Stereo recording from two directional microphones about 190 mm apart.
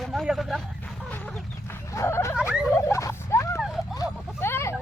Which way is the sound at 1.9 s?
15° left (ahead or behind).